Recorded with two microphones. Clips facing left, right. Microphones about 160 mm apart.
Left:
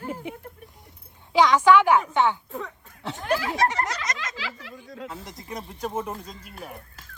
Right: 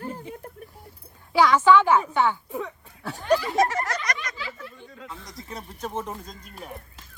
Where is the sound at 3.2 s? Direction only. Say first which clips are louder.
Right 3 dB; 90° left.